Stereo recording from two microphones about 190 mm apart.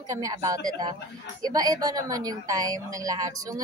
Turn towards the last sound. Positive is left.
turn(degrees=-20)  # may be behind; listen again after turning